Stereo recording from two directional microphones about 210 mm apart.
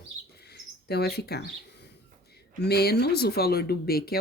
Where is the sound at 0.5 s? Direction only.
50° left (ahead or behind).